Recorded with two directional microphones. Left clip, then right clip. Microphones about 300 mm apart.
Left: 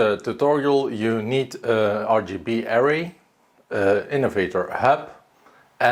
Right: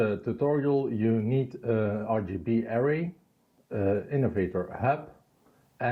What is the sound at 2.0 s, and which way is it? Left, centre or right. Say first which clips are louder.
Speech: left 10 dB; left.